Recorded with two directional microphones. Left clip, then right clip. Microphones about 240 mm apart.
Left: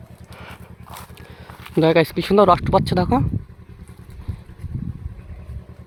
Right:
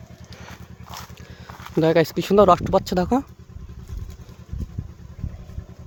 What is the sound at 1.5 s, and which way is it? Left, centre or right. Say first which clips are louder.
Speech: left 2 dB; centre.